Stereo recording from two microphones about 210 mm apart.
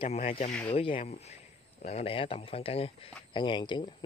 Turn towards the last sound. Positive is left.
turn(degrees=20)  # may be behind; listen again after turning